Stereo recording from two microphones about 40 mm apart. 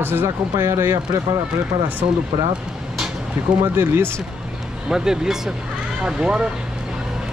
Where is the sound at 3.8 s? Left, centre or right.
Right.